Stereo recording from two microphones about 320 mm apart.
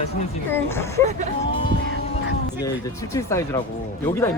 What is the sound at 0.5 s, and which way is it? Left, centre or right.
Speech, centre.